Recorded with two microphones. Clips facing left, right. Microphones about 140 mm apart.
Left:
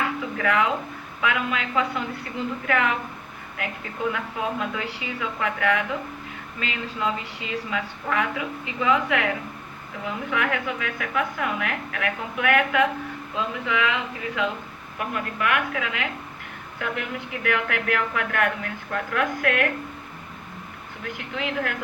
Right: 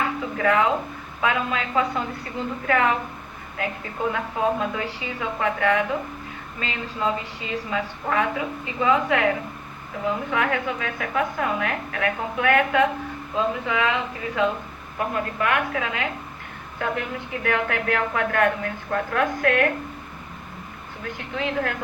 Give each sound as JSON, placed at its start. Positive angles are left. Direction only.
{"t": 0.3, "sound": "a woman's voice", "side_deg": -30}
{"t": 10.3, "sound": "a woman's voice", "side_deg": -35}
{"t": 21.0, "sound": "a woman's voice", "side_deg": -35}